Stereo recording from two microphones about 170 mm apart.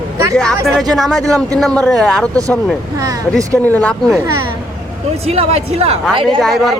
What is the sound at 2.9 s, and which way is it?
Speech, 20° right (ahead or behind).